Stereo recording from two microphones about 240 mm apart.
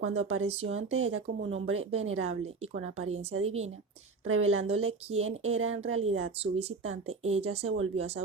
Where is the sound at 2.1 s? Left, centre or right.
Right.